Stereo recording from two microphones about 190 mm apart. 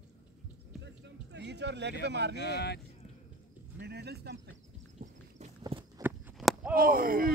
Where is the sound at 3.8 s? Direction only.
60° right (ahead or behind).